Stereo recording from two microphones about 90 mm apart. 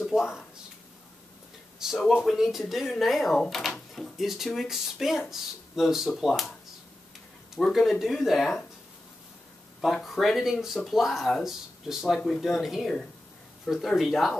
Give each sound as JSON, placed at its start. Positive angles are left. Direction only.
{"t": 0.0, "sound": "speech", "side_deg": -5}
{"t": 1.8, "sound": "speech", "side_deg": -5}
{"t": 7.5, "sound": "speech", "side_deg": 0}
{"t": 10.0, "sound": "speech", "side_deg": 0}